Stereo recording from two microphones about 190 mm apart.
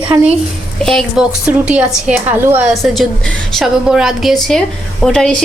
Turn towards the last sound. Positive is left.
turn(degrees=0)  # may be behind; listen again after turning